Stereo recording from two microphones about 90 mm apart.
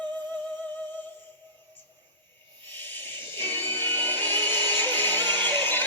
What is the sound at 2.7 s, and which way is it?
Owl, 20° left (ahead or behind).